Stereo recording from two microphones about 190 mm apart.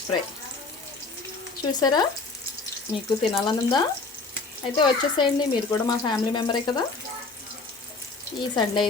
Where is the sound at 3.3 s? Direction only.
20° left (ahead or behind).